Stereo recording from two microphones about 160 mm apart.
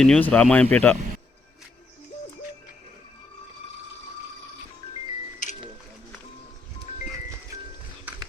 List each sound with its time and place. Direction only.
0.0 s speech: 5° left (ahead or behind)